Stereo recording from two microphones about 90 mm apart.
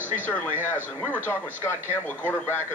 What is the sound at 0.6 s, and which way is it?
Speech, 20° left (ahead or behind).